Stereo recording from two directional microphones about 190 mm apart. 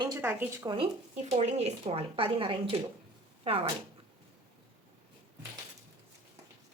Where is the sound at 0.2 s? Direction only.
10° right (ahead or behind).